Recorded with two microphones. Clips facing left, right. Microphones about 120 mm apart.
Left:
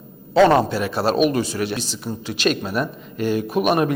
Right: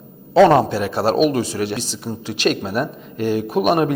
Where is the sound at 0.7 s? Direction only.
55° right (ahead or behind).